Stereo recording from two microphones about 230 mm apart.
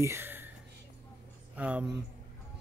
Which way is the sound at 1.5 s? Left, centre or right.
Centre.